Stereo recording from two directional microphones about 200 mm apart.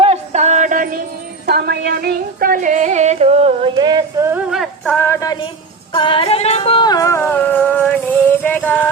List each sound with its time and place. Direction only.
0.0 s music: 30° right (ahead or behind)
1.5 s music: 55° right (ahead or behind); by 8.9 s 10° left (ahead or behind)